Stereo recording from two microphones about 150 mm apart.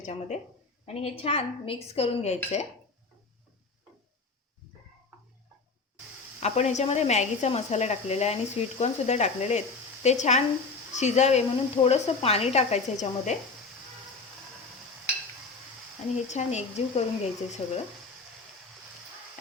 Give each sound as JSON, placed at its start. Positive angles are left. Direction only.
{"t": 0.0, "sound": "speech", "side_deg": 50}
{"t": 0.9, "sound": "speech", "side_deg": 40}
{"t": 6.4, "sound": "speech", "side_deg": 50}
{"t": 16.1, "sound": "speech", "side_deg": 50}
{"t": 17.6, "sound": "speech", "side_deg": 35}